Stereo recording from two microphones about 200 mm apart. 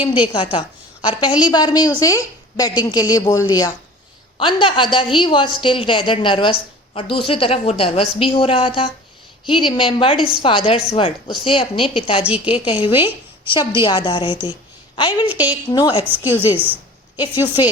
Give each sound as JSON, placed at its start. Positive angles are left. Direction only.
{"t": 1.2, "sound": "a woman's voice", "side_deg": 20}
{"t": 15.3, "sound": "a woman's voice", "side_deg": -10}
{"t": 15.7, "sound": "a woman's voice", "side_deg": 20}
{"t": 16.0, "sound": "a woman's voice", "side_deg": -10}